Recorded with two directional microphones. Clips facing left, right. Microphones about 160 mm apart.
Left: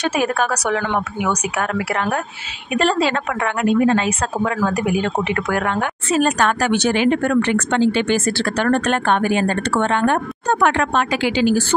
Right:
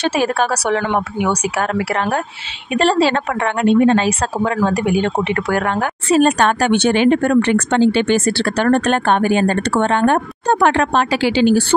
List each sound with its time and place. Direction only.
0.0 s speech: 30° right (ahead or behind)